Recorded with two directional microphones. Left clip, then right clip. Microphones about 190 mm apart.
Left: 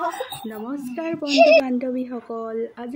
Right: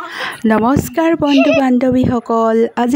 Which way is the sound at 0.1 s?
60° right (ahead or behind).